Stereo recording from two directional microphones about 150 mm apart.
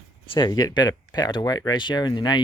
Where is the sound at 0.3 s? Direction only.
25° left (ahead or behind).